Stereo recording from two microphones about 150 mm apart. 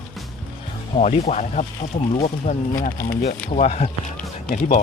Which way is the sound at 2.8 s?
65° left (ahead or behind).